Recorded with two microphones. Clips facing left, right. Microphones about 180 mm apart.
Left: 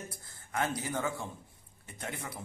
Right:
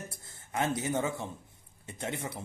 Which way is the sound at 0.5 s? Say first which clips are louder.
Right 3 dB; 20° right (ahead or behind).